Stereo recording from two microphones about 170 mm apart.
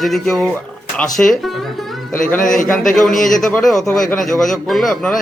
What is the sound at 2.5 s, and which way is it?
A man's voice, 5° left (ahead or behind).